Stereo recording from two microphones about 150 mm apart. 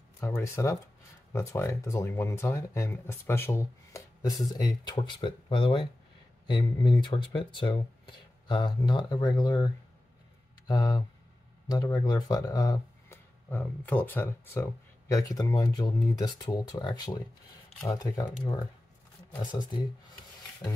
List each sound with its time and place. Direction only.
0.2 s speech: 20° left (ahead or behind)
10.7 s speech: 25° left (ahead or behind)
19.4 s speech: 30° left (ahead or behind)